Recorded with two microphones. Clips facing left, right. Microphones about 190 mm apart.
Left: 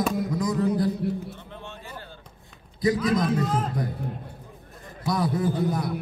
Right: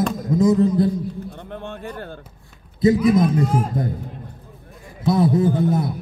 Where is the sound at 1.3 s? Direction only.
55° right (ahead or behind).